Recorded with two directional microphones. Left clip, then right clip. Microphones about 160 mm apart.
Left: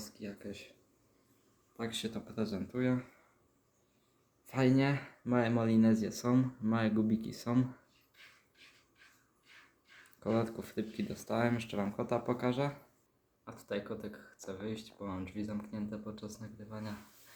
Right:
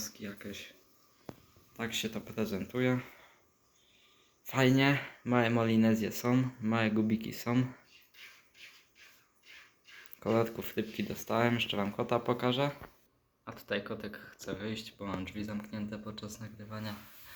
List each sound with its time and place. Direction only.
0.0 s speech: 5° right (ahead or behind)
1.7 s speech: centre (ahead or behind)
4.4 s speech: centre (ahead or behind)
10.2 s speech: centre (ahead or behind)